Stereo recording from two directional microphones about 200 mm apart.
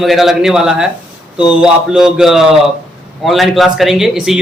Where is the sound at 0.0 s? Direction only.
Centre (ahead or behind).